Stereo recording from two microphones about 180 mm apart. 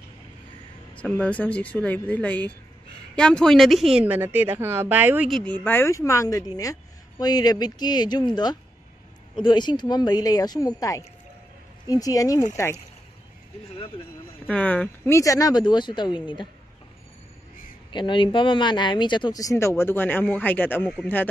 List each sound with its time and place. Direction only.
0.9 s a woman's voice: 5° left (ahead or behind); by 5.3 s 10° right (ahead or behind)
5.3 s speech: 5° left (ahead or behind); by 8.3 s 25° left (ahead or behind)
9.3 s speech: 25° left (ahead or behind)
14.5 s speech: 10° left (ahead or behind); by 16.4 s 25° left (ahead or behind)
17.9 s speech: 25° left (ahead or behind); by 21.0 s 10° left (ahead or behind)